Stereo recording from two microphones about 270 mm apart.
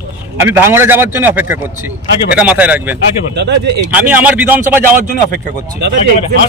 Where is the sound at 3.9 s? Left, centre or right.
Centre.